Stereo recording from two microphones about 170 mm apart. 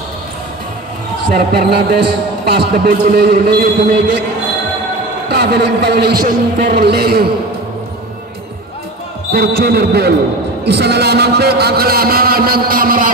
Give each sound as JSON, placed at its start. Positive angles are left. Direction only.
{"t": 1.3, "sound": "a man's voice", "side_deg": -70}
{"t": 5.3, "sound": "a man's voice", "side_deg": -75}
{"t": 9.3, "sound": "a man's voice", "side_deg": -70}